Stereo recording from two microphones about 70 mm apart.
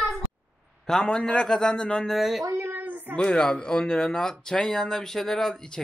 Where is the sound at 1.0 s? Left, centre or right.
Centre.